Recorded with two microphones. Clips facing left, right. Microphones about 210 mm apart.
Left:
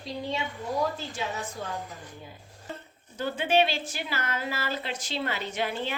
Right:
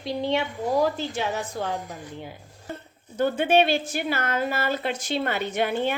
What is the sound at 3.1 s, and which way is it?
A woman's voice, 55° right (ahead or behind).